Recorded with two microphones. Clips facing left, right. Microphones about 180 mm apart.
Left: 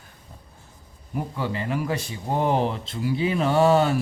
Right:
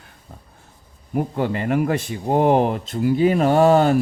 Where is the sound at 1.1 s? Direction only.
55° right (ahead or behind).